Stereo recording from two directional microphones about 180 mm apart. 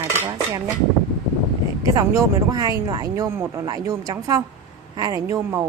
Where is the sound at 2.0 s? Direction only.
20° right (ahead or behind).